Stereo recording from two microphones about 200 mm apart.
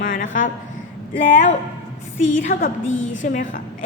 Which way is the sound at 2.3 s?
40° left (ahead or behind).